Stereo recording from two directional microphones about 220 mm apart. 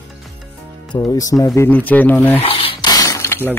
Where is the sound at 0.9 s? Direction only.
15° left (ahead or behind).